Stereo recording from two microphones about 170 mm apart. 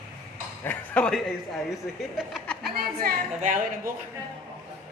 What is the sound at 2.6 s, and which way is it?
Speech, 65° right (ahead or behind).